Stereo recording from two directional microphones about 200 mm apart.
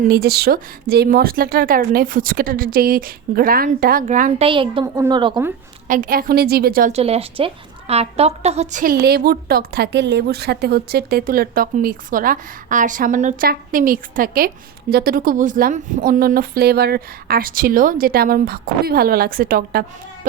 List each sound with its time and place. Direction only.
0.1 s a woman's voice: 50° right (ahead or behind)
4.4 s a woman's voice: 25° right (ahead or behind)
5.9 s a woman's voice: 45° right (ahead or behind)
6.9 s a woman's voice: 30° right (ahead or behind); by 19.8 s 45° right (ahead or behind)